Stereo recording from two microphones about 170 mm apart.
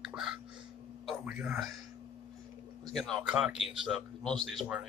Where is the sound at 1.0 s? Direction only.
5° right (ahead or behind).